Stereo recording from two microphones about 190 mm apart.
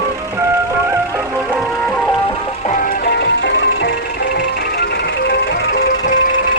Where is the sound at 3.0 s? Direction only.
60° left (ahead or behind).